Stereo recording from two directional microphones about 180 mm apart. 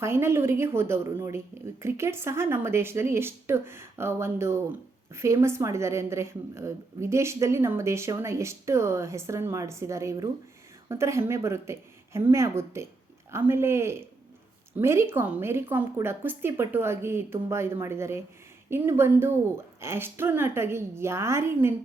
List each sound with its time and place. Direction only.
0.0 s a woman's voice: 15° right (ahead or behind)